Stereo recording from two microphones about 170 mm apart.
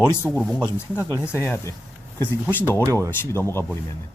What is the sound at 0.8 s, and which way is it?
Speech, 15° left (ahead or behind).